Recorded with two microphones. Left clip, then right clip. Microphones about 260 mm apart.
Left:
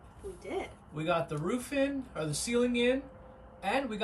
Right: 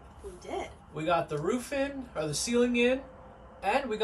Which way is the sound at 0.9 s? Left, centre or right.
Centre.